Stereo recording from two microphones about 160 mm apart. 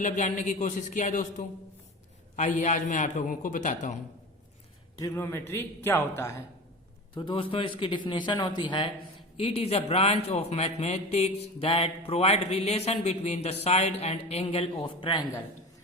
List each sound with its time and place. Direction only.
0.0 s a man's voice: 50° left (ahead or behind)
4.9 s a man's voice: 20° left (ahead or behind)
7.1 s a man's voice: 30° left (ahead or behind)
9.4 s a man's voice: 40° left (ahead or behind)